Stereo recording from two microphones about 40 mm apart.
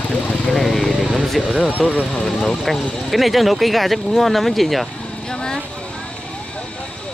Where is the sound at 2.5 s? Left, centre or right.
Centre.